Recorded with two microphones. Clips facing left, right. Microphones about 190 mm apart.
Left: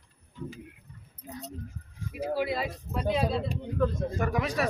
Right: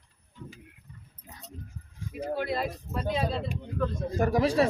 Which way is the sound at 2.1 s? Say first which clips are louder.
Left 1 dB; 5° left (ahead or behind).